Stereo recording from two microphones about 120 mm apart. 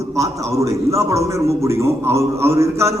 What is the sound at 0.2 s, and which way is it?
A man's voice, 25° right (ahead or behind).